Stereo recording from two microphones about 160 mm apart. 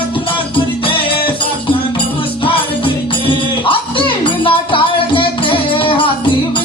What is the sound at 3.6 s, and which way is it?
Music, 35° left (ahead or behind).